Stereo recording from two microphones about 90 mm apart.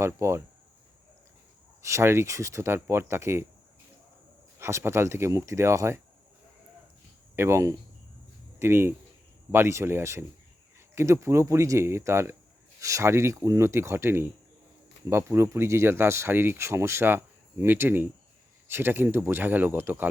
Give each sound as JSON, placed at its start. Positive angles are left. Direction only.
{"t": 0.0, "sound": "speech", "side_deg": -30}
{"t": 1.8, "sound": "speech", "side_deg": -30}
{"t": 4.6, "sound": "speech", "side_deg": -30}
{"t": 7.3, "sound": "speech", "side_deg": -30}